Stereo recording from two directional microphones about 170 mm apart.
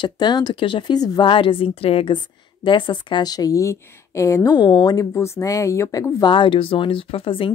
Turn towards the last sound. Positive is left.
turn(degrees=30)  # may be behind; listen again after turning